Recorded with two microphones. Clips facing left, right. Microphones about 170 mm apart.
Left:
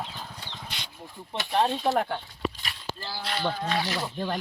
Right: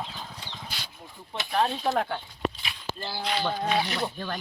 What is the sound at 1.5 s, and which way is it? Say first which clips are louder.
Speech: left 1 dB; 15° left (ahead or behind).